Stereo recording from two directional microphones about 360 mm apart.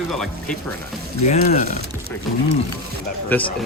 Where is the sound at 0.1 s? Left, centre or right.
Centre.